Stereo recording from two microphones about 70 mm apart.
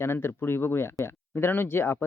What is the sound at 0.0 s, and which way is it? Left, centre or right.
Crowing, left.